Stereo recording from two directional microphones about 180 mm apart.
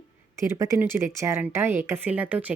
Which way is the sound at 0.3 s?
15° right (ahead or behind).